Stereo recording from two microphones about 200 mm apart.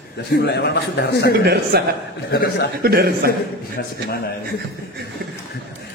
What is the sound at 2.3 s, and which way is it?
Speech, 50° left (ahead or behind).